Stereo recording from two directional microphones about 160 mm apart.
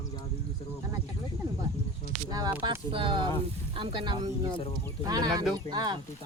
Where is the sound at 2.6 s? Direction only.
30° right (ahead or behind).